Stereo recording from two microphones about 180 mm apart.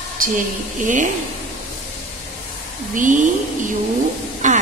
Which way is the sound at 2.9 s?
45° right (ahead or behind).